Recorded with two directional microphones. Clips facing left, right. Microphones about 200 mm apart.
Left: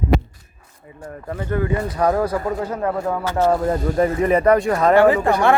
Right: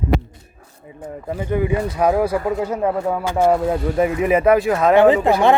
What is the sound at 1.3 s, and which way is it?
Speech, 15° right (ahead or behind).